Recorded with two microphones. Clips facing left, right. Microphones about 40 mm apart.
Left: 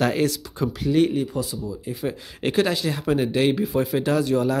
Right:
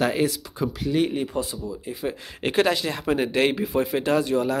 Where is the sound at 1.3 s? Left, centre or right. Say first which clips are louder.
Even; right.